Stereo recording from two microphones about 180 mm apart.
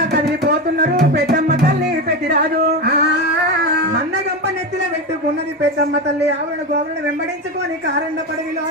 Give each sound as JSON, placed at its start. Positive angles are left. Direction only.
{"t": 0.1, "sound": "music", "side_deg": -60}